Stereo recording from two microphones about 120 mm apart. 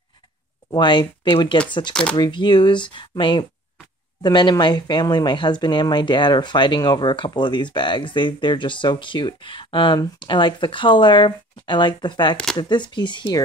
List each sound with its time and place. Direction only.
0.7 s speech: 40° left (ahead or behind)